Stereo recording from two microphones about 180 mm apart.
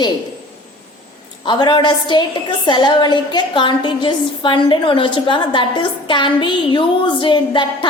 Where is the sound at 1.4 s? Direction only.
25° left (ahead or behind).